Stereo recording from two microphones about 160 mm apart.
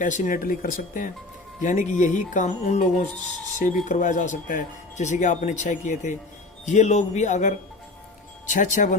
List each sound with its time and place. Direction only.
0.0 s speech: 55° left (ahead or behind)